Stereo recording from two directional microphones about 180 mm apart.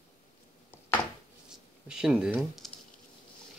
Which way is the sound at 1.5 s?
5° right (ahead or behind).